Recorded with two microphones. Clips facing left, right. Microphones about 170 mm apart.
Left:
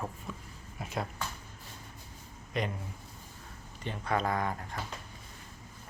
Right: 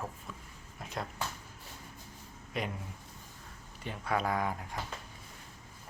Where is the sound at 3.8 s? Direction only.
5° right (ahead or behind).